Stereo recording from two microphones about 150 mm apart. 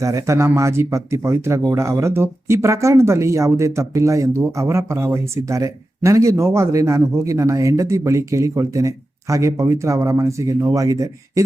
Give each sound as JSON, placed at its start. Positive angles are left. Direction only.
{"t": 0.0, "sound": "speech", "side_deg": -20}